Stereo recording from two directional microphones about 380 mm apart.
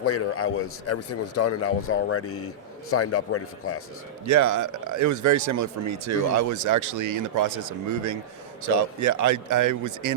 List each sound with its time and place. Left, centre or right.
0.0 s speech: left
4.3 s speech: right